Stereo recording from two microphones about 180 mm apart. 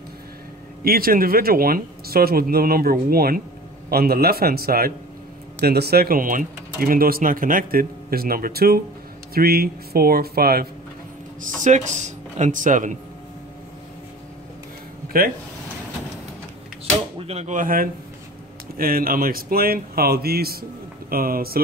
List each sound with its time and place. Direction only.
0.8 s speech: 55° right (ahead or behind)
11.4 s speech: 45° right (ahead or behind)
17.3 s speech: 40° right (ahead or behind)